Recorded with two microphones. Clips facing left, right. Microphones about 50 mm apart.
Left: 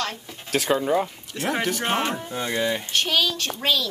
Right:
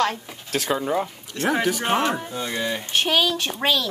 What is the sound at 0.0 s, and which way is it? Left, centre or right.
Speech, right.